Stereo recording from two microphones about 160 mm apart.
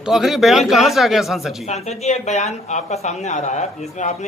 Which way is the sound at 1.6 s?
45° left (ahead or behind).